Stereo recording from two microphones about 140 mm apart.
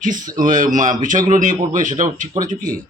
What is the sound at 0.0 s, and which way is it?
Speech, 70° right (ahead or behind).